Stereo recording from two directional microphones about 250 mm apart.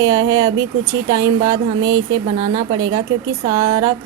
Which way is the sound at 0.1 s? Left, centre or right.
Centre.